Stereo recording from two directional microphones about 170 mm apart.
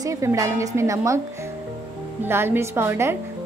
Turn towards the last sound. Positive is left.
turn(degrees=-15)  # may be behind; listen again after turning